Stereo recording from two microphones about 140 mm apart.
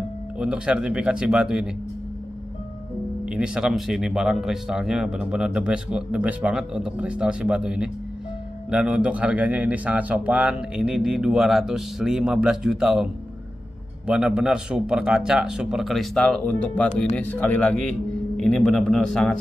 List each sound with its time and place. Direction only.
0.4 s speech: 5° right (ahead or behind)
3.3 s a man's voice: 5° right (ahead or behind)